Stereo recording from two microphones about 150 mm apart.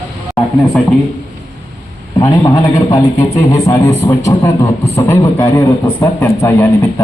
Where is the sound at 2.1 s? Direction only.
25° left (ahead or behind).